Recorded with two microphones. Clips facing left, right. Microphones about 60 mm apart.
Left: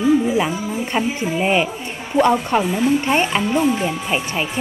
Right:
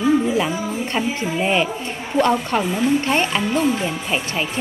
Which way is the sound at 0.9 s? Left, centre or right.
Centre.